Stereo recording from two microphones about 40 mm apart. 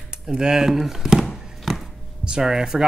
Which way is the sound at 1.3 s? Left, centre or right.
Centre.